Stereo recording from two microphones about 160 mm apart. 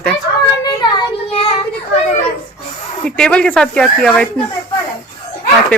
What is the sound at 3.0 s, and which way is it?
Speech, 5° left (ahead or behind).